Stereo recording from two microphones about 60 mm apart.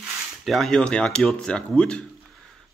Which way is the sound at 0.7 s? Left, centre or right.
Centre.